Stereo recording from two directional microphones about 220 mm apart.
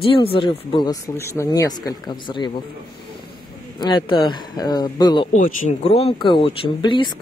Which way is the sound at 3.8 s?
20° left (ahead or behind).